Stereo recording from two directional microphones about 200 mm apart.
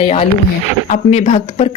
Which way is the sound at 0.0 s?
30° left (ahead or behind).